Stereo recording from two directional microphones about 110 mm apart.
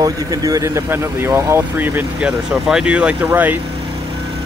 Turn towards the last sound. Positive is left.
turn(degrees=-55)  # may be behind; listen again after turning